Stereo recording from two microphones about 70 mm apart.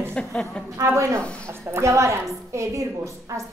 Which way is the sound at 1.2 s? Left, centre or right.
Centre.